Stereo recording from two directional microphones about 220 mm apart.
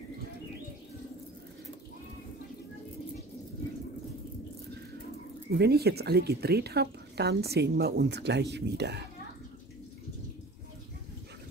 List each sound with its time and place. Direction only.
5.5 s a woman's voice: 45° right (ahead or behind)